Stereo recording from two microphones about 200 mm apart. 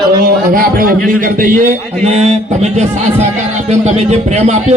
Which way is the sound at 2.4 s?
35° right (ahead or behind).